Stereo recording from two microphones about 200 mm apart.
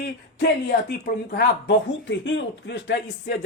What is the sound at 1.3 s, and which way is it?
Speech, 60° left (ahead or behind).